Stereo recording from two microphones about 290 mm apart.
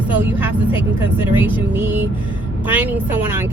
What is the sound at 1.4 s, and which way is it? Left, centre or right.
Speech, centre.